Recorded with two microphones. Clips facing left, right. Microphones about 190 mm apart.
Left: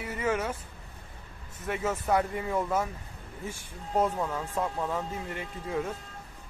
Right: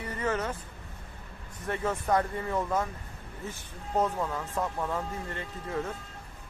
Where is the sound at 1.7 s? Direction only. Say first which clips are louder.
Even; 5° left (ahead or behind).